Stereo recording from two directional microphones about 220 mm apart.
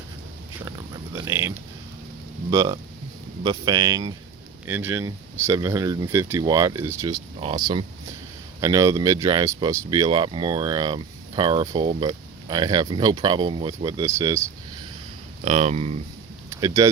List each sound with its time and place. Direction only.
1.1 s speech: 15° right (ahead or behind)
15.4 s speech: 30° right (ahead or behind)
16.6 s speech: 15° right (ahead or behind)